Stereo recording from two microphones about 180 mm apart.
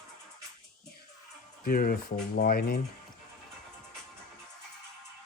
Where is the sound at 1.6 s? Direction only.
55° left (ahead or behind).